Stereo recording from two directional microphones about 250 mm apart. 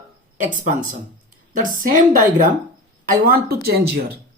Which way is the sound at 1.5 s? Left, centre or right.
Right.